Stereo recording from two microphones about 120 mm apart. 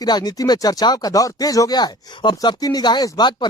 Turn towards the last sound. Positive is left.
turn(degrees=40)  # may be behind; listen again after turning